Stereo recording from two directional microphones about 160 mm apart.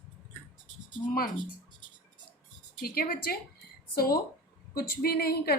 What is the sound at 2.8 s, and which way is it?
A woman's voice, 70° left (ahead or behind).